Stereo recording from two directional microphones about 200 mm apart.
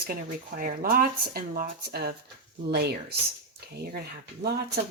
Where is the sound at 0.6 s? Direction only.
45° right (ahead or behind).